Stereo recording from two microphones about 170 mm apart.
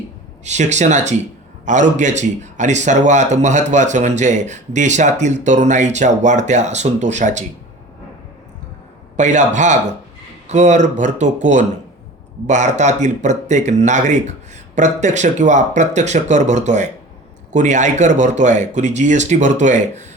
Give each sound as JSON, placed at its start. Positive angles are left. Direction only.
{"t": 0.4, "sound": "a man's voice", "side_deg": -45}
{"t": 9.1, "sound": "a man's voice", "side_deg": -45}